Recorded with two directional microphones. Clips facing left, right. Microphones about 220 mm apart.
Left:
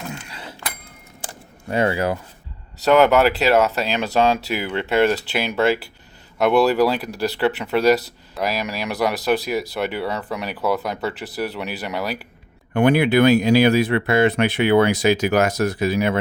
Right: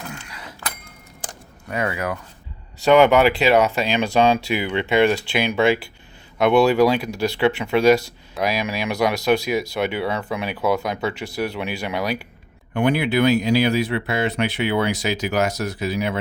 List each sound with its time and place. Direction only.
0.1 s mechanisms: 30° left (ahead or behind)
1.6 s speech: 30° left (ahead or behind)
2.8 s speech: centre (ahead or behind)
11.1 s speech: 35° left (ahead or behind)
11.3 s speech: 5° left (ahead or behind)
12.7 s speech: 50° left (ahead or behind)